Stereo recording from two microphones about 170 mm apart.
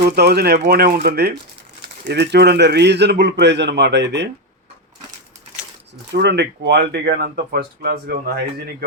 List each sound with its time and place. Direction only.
0.0 s speech: 70° right (ahead or behind)
2.0 s a man's voice: 85° right
6.1 s speech: 85° right; by 8.1 s 70° right (ahead or behind)